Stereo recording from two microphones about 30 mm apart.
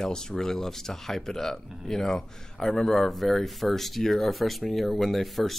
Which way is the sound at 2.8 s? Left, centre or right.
Centre.